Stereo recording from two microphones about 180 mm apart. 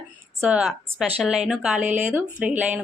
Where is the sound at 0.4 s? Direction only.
5° right (ahead or behind).